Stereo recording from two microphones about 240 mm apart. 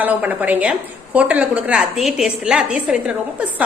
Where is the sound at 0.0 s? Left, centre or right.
Centre.